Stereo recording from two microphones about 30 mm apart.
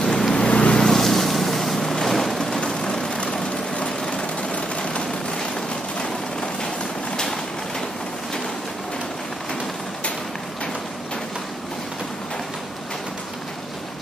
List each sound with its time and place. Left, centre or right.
0.0 s vehicle: centre
0.5 s vehicle: left
0.7 s boat: centre
2.6 s vehicle: left